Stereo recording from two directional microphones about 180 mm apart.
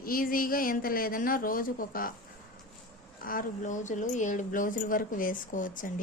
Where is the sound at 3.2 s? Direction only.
50° left (ahead or behind).